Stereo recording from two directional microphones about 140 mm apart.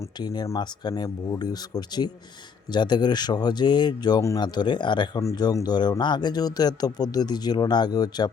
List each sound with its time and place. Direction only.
0.2 s speech: 30° left (ahead or behind)